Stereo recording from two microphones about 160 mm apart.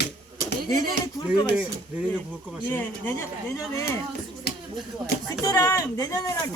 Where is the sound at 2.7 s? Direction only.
15° left (ahead or behind).